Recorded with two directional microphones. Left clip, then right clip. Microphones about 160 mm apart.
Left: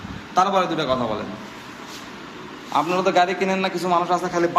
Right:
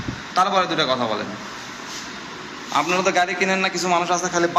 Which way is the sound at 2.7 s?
15° left (ahead or behind).